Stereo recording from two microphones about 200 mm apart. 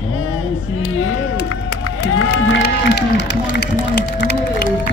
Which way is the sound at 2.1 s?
80° left.